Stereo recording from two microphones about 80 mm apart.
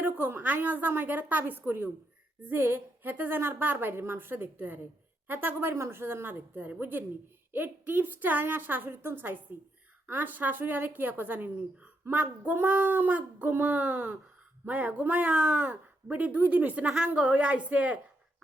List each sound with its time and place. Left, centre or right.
0.0 s speech: right